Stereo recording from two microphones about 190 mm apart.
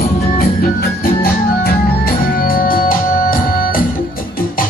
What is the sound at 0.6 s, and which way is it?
Organ, 50° left (ahead or behind).